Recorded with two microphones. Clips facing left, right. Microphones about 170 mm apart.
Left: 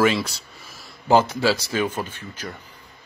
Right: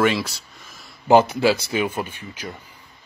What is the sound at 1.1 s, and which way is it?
Speech, 15° right (ahead or behind).